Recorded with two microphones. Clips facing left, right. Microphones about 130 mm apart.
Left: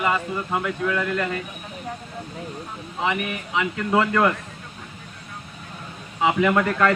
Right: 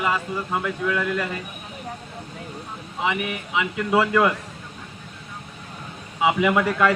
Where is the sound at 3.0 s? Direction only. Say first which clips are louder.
Even; 5° right (ahead or behind).